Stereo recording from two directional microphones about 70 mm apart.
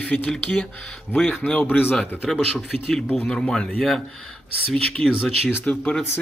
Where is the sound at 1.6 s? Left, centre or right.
Left.